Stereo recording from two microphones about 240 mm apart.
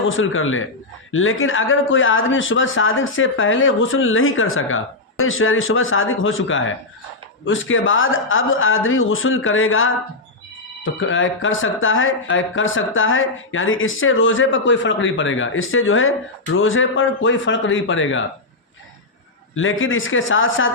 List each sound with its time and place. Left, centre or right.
0.0 s speech: left
11.0 s speech: left
19.5 s speech: left